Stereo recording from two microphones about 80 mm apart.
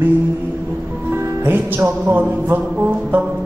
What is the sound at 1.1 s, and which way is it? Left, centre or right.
Music, right.